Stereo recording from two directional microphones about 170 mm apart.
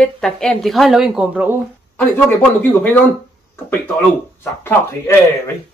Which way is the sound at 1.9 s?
10° left (ahead or behind).